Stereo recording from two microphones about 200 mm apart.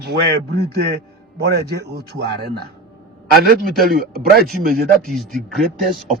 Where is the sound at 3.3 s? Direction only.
50° right (ahead or behind).